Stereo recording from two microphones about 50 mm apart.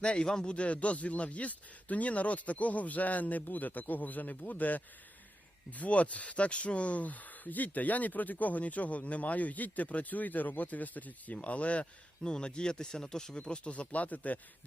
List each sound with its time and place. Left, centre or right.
0.0 s speech: centre
13.4 s speech: left